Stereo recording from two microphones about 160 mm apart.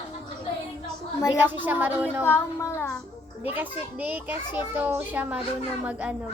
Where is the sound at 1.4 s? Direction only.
10° right (ahead or behind).